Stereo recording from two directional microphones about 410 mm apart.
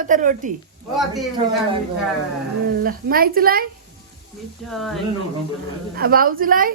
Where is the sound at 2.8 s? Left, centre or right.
Right.